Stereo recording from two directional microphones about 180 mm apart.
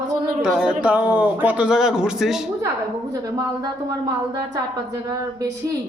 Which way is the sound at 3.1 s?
20° right (ahead or behind).